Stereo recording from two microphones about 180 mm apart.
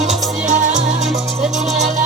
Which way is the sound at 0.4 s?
45° right (ahead or behind).